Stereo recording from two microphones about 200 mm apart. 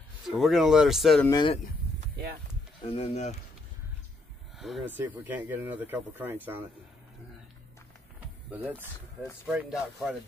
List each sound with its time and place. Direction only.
0.3 s speech: centre (ahead or behind)
1.2 s speech: 20° left (ahead or behind)
2.9 s speech: 30° left (ahead or behind)
4.6 s speech: centre (ahead or behind)
8.5 s speech: 10° right (ahead or behind)